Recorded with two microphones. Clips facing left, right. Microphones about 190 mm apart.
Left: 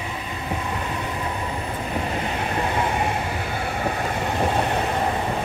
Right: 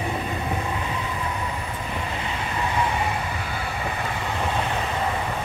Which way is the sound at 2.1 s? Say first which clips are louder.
Left 4 dB; 45° left (ahead or behind).